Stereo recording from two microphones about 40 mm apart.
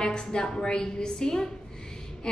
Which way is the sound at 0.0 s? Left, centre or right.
Centre.